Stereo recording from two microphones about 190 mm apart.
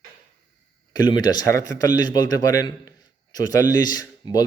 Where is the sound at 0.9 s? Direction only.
20° left (ahead or behind).